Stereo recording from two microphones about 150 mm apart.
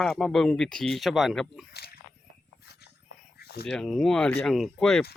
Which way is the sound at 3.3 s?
90° left.